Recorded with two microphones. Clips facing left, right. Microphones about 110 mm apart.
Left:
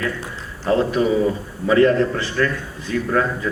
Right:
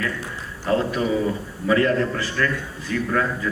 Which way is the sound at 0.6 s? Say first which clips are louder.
Left 4 dB; 25° left (ahead or behind).